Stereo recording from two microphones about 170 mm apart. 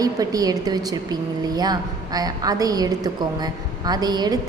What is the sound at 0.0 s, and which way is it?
A woman's voice, 20° right (ahead or behind).